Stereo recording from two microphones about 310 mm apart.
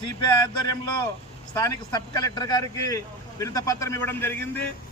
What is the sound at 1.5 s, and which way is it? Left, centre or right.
A man's voice, centre.